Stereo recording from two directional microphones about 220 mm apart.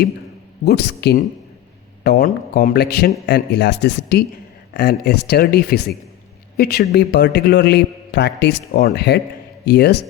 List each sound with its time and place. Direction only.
0.6 s a man's voice: 50° left (ahead or behind)